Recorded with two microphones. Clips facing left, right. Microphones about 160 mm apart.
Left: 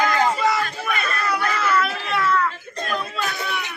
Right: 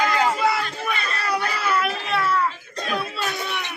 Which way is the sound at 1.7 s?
35° right (ahead or behind).